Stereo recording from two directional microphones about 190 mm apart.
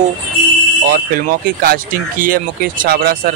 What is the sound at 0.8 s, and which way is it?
Speech, 50° right (ahead or behind).